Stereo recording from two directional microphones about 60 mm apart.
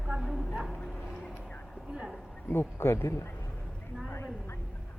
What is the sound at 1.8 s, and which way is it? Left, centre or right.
Speech, centre.